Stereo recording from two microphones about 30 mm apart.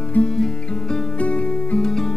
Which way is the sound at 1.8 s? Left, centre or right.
Centre.